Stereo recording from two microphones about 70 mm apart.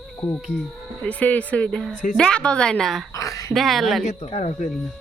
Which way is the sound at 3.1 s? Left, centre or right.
Left.